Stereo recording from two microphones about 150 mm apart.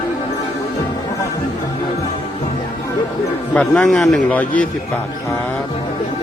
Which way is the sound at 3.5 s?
5° left (ahead or behind).